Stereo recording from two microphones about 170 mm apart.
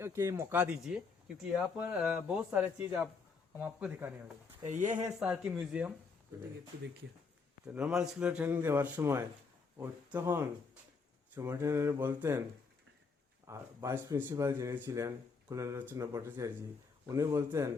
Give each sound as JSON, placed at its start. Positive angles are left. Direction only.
{"t": 0.0, "sound": "speech", "side_deg": -15}
{"t": 4.6, "sound": "speech", "side_deg": -45}
{"t": 5.2, "sound": "speech", "side_deg": -5}
{"t": 7.7, "sound": "speech", "side_deg": -5}
{"t": 13.5, "sound": "speech", "side_deg": -15}